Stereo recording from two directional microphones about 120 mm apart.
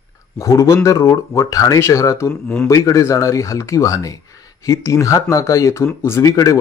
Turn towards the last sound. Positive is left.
turn(degrees=30)  # may be behind; listen again after turning